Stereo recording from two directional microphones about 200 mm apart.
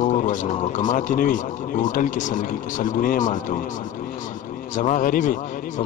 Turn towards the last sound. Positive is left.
turn(degrees=40)  # may be behind; listen again after turning